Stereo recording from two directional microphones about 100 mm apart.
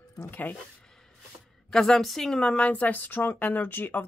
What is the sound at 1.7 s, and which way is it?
Speech, 5° left (ahead or behind).